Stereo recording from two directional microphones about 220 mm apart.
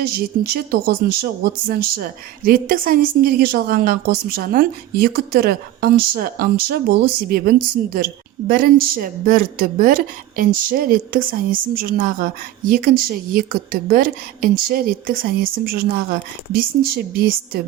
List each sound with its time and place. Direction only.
0.0 s speech: 45° right (ahead or behind)